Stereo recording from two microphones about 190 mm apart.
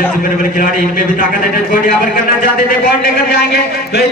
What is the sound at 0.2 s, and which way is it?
Speech, 45° left (ahead or behind).